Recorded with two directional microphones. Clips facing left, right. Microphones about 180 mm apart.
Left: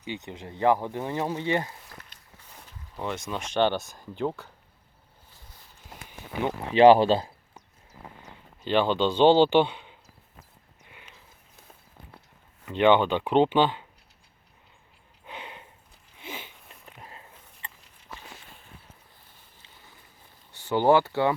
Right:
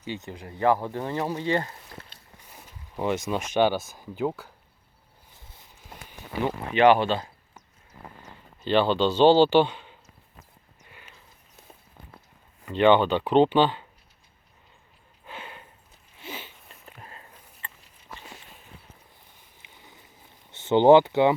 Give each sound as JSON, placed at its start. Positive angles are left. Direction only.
{"t": 0.0, "sound": "a man's voice", "side_deg": 15}
{"t": 1.9, "sound": "walk", "side_deg": -30}
{"t": 2.5, "sound": "speech", "side_deg": -10}
{"t": 6.7, "sound": "speech", "side_deg": 35}
{"t": 8.6, "sound": "a man's voice", "side_deg": 10}
{"t": 12.6, "sound": "a man's voice", "side_deg": 10}
{"t": 15.3, "sound": "a sound", "side_deg": 20}
{"t": 19.6, "sound": "a sound", "side_deg": -20}
{"t": 20.5, "sound": "speech", "side_deg": -20}